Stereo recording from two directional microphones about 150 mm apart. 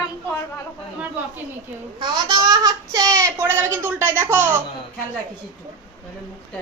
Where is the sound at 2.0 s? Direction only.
30° right (ahead or behind).